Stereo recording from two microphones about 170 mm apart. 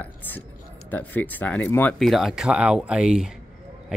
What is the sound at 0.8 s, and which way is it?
Speech, 10° left (ahead or behind).